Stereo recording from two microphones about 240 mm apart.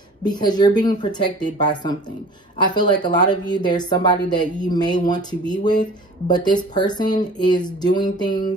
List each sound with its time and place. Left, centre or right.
0.2 s speech: centre